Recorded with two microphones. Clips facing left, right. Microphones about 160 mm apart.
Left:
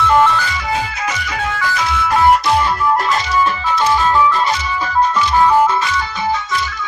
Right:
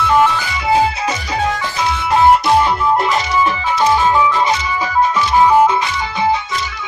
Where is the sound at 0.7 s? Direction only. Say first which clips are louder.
Right 6 dB; 30° right (ahead or behind).